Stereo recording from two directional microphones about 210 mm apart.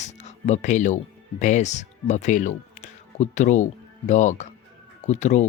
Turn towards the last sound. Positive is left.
turn(degrees=35)  # may be behind; listen again after turning